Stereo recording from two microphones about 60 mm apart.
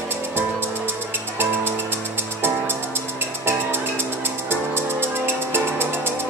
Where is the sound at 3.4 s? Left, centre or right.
Right.